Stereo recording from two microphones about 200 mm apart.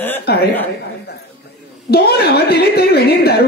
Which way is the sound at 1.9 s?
50° left (ahead or behind).